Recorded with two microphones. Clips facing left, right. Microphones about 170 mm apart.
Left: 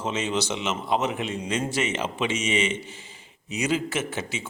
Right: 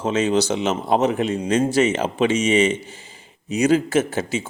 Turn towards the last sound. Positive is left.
turn(degrees=-40)  # may be behind; listen again after turning